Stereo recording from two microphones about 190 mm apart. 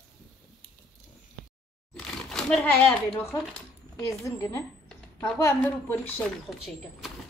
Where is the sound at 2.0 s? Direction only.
Centre (ahead or behind).